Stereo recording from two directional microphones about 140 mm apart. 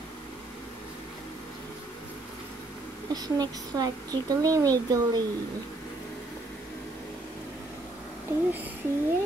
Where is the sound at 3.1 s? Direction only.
30° right (ahead or behind).